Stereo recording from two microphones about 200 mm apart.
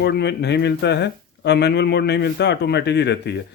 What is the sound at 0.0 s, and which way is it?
Speech, 55° left (ahead or behind).